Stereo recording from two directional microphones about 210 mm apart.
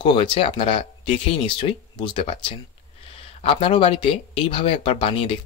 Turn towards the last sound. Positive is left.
turn(degrees=25)  # may be behind; listen again after turning